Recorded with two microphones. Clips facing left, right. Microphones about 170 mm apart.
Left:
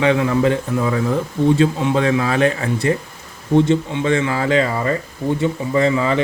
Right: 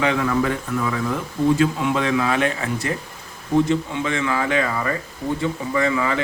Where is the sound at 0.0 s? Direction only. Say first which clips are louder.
Left 4 dB; 25° left (ahead or behind).